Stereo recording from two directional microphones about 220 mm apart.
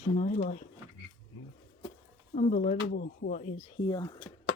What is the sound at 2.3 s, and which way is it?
Speech, 35° left (ahead or behind).